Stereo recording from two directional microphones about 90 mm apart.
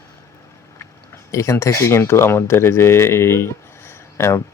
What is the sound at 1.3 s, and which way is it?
Speech, 35° left (ahead or behind).